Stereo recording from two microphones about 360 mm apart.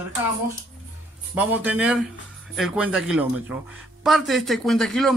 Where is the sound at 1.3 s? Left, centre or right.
Centre.